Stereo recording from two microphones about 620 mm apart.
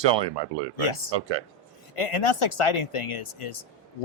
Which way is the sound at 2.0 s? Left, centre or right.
Left.